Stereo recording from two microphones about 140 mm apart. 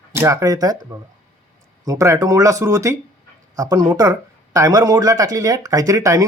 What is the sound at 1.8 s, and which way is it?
Speech, 25° right (ahead or behind).